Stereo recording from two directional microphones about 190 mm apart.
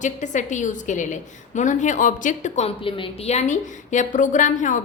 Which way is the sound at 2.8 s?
25° left (ahead or behind).